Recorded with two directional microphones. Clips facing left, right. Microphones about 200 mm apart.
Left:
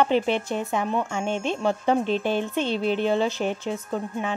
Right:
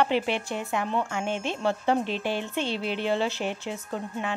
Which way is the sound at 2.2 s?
50° left (ahead or behind).